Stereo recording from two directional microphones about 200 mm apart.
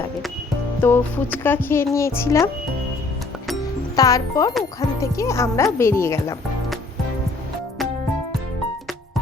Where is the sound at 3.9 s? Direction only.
15° left (ahead or behind).